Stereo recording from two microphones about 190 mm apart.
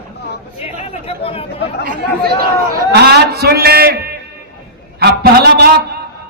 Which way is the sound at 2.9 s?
60° right (ahead or behind).